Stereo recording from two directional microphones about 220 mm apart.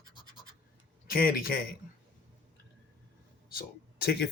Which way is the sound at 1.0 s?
40° left (ahead or behind).